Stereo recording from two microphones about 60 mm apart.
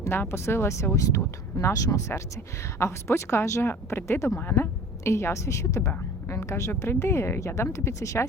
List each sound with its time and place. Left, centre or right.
0.0 s speech: left
1.6 s speech: left